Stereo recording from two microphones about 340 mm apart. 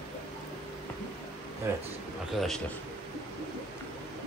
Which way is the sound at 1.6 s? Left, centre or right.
Centre.